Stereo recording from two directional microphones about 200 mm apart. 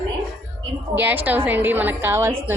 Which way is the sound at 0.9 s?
10° right (ahead or behind).